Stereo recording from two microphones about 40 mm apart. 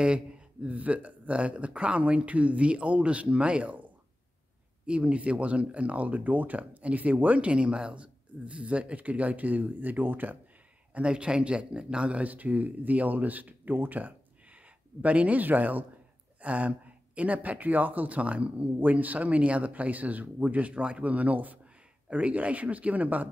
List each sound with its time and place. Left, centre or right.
0.0 s a sound: right
0.7 s speech: right
4.8 s speech: right
11.0 s speech: right
12.3 s speech: right